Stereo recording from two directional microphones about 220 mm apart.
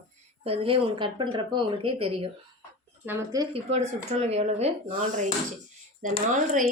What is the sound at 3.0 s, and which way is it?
Speech, 10° right (ahead or behind).